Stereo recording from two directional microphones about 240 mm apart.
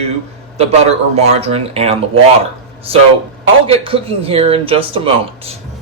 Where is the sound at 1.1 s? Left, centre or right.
Right.